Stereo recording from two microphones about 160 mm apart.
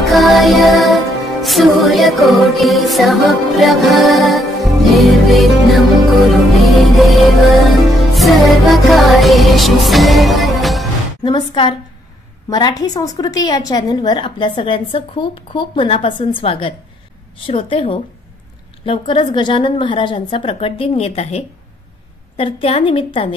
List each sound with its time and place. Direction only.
0.0 s music: centre (ahead or behind)
11.2 s a woman's voice: 30° left (ahead or behind)